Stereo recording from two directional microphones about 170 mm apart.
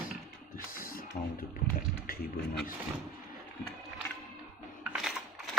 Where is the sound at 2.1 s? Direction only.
60° left (ahead or behind).